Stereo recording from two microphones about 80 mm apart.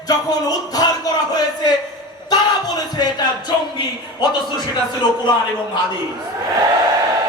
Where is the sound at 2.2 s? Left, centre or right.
Left.